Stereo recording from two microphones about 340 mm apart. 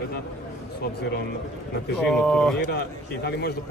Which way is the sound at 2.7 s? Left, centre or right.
Left.